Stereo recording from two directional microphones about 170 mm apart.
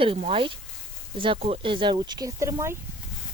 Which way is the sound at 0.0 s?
35° right (ahead or behind).